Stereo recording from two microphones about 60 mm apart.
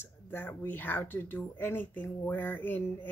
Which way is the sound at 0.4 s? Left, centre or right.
Left.